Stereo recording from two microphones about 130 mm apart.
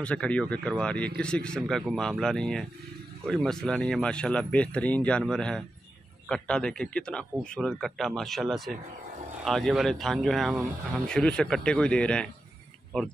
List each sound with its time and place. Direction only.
0.0 s speech: 10° left (ahead or behind)